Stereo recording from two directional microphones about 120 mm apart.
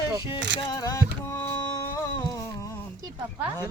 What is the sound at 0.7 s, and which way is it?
Music, 30° left (ahead or behind).